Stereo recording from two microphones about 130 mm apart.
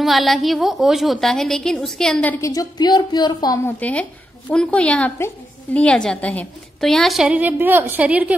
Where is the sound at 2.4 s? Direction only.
25° left (ahead or behind).